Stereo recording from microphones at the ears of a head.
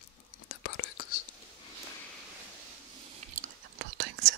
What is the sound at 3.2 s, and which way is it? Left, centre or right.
Whispering, right.